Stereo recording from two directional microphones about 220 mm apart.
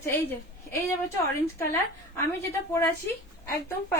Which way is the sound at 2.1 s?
10° left (ahead or behind).